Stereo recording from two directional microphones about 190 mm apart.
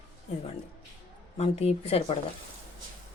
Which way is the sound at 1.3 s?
35° left (ahead or behind).